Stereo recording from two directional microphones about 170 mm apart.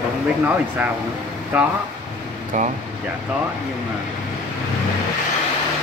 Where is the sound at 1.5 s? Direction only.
10° right (ahead or behind).